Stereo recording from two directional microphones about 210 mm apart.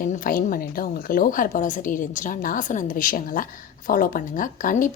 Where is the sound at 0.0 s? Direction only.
40° left (ahead or behind).